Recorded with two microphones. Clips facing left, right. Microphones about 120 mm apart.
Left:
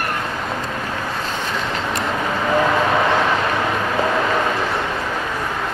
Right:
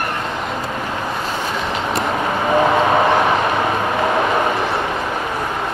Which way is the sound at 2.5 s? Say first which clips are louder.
Right 3 dB; 25° right (ahead or behind).